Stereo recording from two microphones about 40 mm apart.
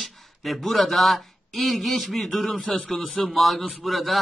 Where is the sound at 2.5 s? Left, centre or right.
Left.